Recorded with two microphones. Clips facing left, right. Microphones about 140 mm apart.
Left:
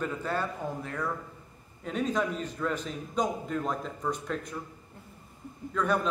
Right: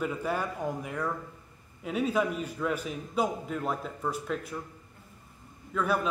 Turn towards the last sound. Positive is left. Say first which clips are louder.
# left 1 dB
turn(degrees=-5)  # may be behind; listen again after turning